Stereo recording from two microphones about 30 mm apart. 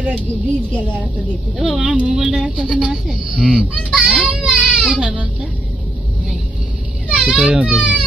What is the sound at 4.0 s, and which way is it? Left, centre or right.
Children playing, right.